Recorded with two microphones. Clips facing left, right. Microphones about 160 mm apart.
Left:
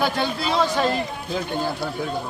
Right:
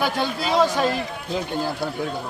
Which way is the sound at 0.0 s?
10° right (ahead or behind).